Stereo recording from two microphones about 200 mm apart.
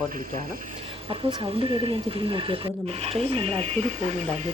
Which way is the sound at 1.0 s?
25° right (ahead or behind).